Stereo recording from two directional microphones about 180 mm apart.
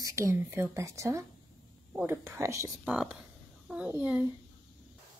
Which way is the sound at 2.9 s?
Centre (ahead or behind).